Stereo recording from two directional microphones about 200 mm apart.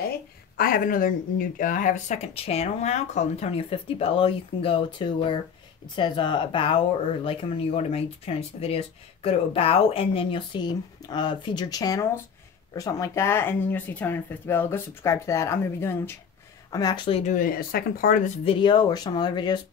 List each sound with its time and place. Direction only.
0.6 s speech: 45° left (ahead or behind); by 19.6 s 20° left (ahead or behind)